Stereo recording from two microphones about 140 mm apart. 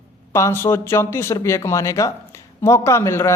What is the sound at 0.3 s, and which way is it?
Speech, 20° left (ahead or behind).